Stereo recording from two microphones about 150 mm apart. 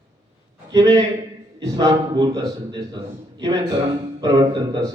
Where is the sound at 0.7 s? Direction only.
25° right (ahead or behind).